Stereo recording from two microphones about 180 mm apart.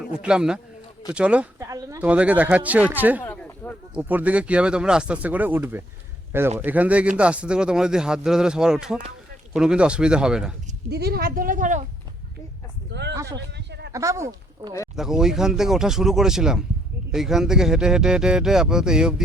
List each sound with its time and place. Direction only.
0.1 s speech: 5° right (ahead or behind)
1.6 s a sound: 15° right (ahead or behind)
2.0 s speech: 5° right (ahead or behind)
3.2 s a sound: 10° left (ahead or behind)
3.9 s speech: 10° right (ahead or behind)
10.8 s a woman's voice: 65° right (ahead or behind); by 11.9 s 45° right (ahead or behind)
12.9 s a sound: 70° right (ahead or behind)
13.9 s speech: 15° right (ahead or behind)
14.9 s speech: 5° right (ahead or behind)